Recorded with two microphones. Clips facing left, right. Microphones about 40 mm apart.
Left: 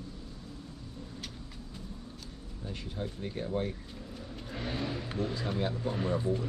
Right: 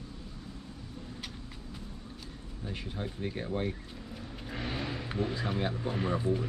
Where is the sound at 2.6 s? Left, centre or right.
Centre.